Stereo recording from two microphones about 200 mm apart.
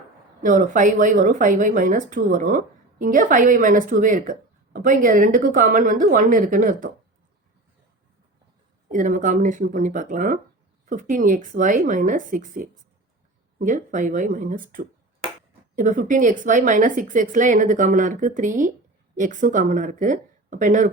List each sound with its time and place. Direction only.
0.4 s speech: 40° right (ahead or behind)
8.9 s speech: 40° right (ahead or behind)